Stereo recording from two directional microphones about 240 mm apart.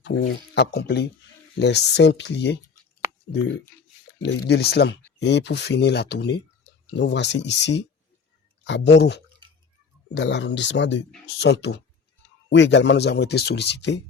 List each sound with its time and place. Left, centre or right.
0.0 s speech: left
3.7 s a sound: centre
4.2 s speech: left